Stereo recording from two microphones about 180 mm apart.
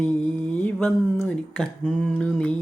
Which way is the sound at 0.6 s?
10° left (ahead or behind).